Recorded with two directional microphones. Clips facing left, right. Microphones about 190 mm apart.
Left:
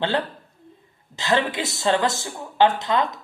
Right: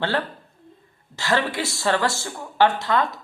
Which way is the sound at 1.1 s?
20° left (ahead or behind).